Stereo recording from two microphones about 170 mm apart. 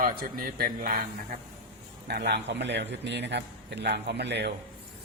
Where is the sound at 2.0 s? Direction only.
75° right (ahead or behind).